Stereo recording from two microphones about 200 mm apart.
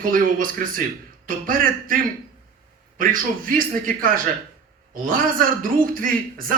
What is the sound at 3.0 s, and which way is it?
A man's voice, 45° right (ahead or behind).